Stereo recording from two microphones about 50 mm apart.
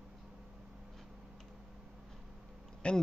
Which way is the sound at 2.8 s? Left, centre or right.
Left.